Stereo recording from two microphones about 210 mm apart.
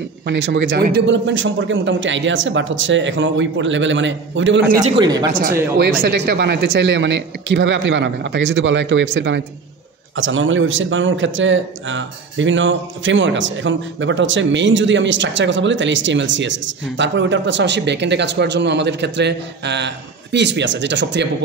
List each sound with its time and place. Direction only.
0.3 s speech: 50° right (ahead or behind)
4.8 s speech: 20° right (ahead or behind)
5.3 s speech: 40° right (ahead or behind); by 9.4 s 55° right (ahead or behind)
10.1 s speech: 65° right (ahead or behind)